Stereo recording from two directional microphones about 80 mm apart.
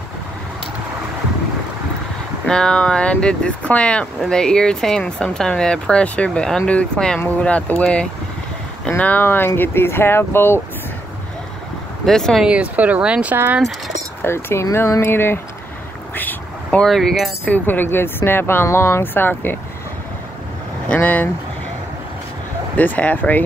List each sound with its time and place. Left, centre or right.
2.4 s speech: centre; by 10.6 s left
12.1 s speech: centre
12.4 s speech: centre
13.6 s speech: centre
14.2 s speech: left
15.0 s speech: left
16.2 s vehicle: left
16.8 s speech: centre
17.5 s speech: left
20.9 s speech: left
22.8 s speech: centre